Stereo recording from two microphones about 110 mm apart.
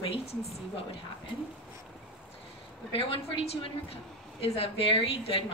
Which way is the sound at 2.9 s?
55° left (ahead or behind).